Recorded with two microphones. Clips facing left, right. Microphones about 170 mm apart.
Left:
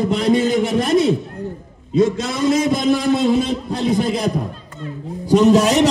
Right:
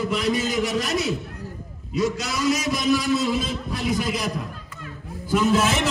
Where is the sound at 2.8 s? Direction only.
55° left (ahead or behind).